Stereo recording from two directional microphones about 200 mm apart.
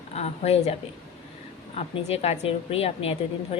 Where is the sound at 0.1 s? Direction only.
30° left (ahead or behind).